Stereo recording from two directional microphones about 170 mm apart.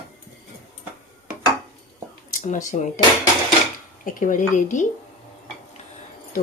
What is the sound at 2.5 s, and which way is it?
Speech, 45° left (ahead or behind).